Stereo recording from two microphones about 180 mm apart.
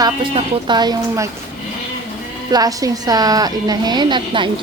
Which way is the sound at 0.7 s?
25° right (ahead or behind).